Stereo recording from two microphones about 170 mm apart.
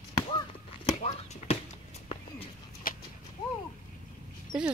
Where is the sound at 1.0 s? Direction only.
40° left (ahead or behind).